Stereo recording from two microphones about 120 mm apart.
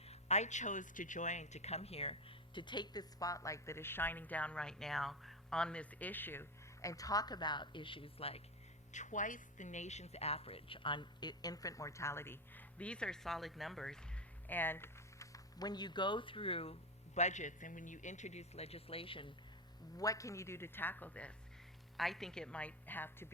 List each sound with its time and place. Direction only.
0.1 s a man's voice: 70° left (ahead or behind)
2.6 s a woman's voice: 40° left (ahead or behind)
8.9 s a woman's voice: 90° left; by 14.0 s 5° left (ahead or behind)
14.4 s speech: 15° left (ahead or behind); by 16.7 s 50° left (ahead or behind)
17.2 s a man's voice: 80° left; by 19.3 s 45° left (ahead or behind)
20.0 s a woman's voice: 30° left (ahead or behind)